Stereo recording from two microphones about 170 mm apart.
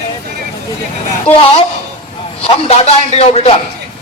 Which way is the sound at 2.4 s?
35° left (ahead or behind).